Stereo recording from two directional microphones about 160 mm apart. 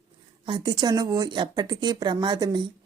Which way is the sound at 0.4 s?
30° right (ahead or behind).